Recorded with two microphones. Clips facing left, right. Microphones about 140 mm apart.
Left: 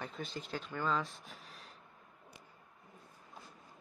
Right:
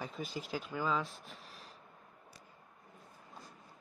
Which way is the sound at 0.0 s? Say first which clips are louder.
Right 1 dB; 5° right (ahead or behind).